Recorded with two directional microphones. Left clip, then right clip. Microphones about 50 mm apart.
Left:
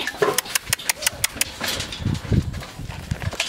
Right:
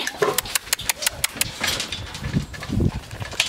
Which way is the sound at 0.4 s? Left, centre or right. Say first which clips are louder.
Left 1 dB; centre.